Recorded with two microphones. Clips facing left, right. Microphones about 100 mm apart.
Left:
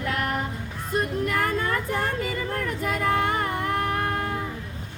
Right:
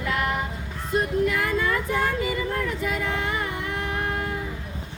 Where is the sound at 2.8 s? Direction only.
50° left (ahead or behind).